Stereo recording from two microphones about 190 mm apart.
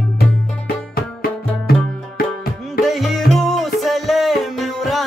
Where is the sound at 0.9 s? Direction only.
55° left (ahead or behind).